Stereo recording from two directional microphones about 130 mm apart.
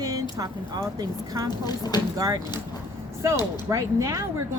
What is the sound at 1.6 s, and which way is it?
Speech, 30° left (ahead or behind).